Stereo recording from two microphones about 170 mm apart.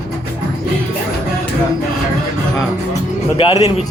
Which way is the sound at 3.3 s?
25° left (ahead or behind).